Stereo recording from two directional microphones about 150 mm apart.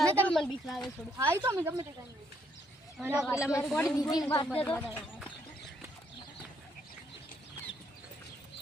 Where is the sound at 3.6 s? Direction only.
5° left (ahead or behind).